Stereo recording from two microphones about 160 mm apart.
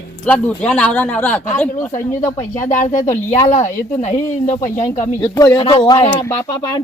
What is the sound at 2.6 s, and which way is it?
Speech, 50° left (ahead or behind).